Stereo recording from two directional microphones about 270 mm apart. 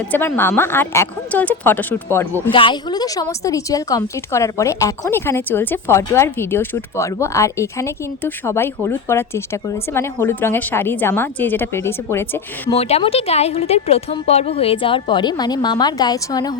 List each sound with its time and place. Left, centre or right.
0.1 s a woman's voice: centre
2.5 s a woman's voice: centre
12.7 s a woman's voice: left